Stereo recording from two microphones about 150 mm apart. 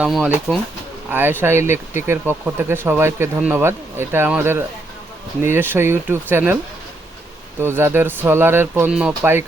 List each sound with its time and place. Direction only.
0.0 s speech: 10° right (ahead or behind)
7.6 s speech: 15° right (ahead or behind)